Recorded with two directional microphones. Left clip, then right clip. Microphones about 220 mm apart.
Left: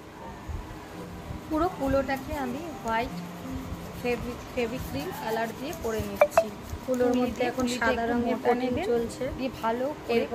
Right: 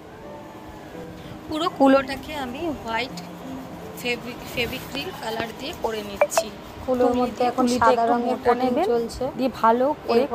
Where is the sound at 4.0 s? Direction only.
35° right (ahead or behind).